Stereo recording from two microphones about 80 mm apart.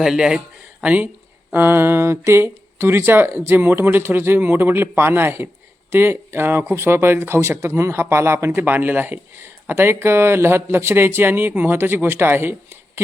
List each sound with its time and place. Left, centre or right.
0.0 s speech: centre
0.8 s speech: right